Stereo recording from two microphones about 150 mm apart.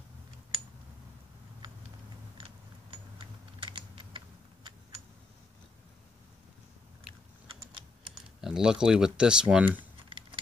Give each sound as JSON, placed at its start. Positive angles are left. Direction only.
{"t": 3.5, "sound": "typing", "side_deg": -35}
{"t": 8.4, "sound": "speech", "side_deg": -5}
{"t": 10.0, "sound": "a sound", "side_deg": -35}